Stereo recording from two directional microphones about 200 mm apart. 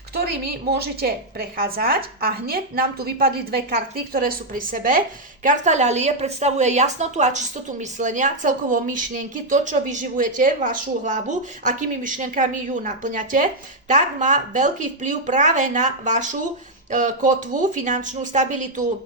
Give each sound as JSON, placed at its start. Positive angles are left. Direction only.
{"t": 0.8, "sound": "a woman's voice", "side_deg": -50}